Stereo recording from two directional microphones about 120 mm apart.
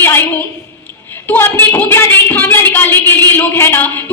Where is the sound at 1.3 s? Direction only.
20° left (ahead or behind).